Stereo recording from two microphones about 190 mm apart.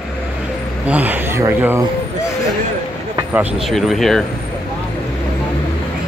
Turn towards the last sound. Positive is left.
turn(degrees=0)  # may be behind; listen again after turning